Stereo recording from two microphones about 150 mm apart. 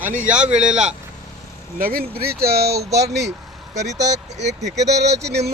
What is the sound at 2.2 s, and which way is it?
Speech, 90° right.